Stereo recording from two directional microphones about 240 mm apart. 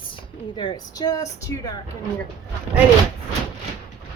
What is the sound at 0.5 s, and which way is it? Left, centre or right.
Speech, centre.